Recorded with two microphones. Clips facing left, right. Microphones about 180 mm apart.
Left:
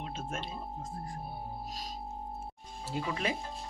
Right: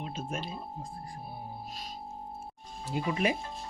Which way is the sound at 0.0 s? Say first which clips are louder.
Right 2 dB; 10° right (ahead or behind).